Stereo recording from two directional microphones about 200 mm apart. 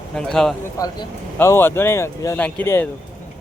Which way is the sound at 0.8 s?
15° left (ahead or behind).